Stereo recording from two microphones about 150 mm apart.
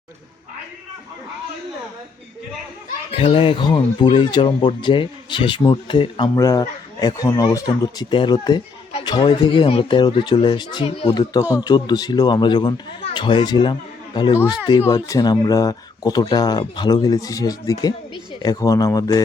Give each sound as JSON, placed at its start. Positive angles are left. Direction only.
{"t": 3.2, "sound": "speech", "side_deg": 35}
{"t": 8.9, "sound": "speech", "side_deg": 40}